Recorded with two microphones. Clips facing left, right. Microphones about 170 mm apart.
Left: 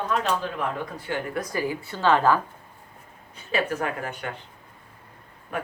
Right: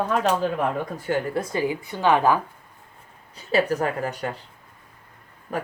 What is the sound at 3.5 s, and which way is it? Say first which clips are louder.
Speech: right 4 dB; 35° right (ahead or behind).